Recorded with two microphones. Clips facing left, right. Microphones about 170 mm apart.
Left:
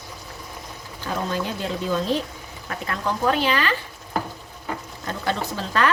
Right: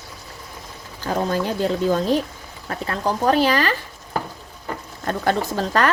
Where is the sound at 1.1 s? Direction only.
45° right (ahead or behind).